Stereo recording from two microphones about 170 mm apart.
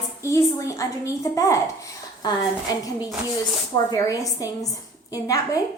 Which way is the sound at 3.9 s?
20° left (ahead or behind).